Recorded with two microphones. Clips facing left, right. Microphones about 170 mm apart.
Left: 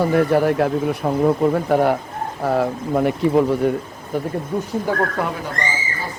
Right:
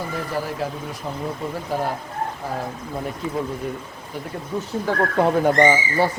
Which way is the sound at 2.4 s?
75° left (ahead or behind).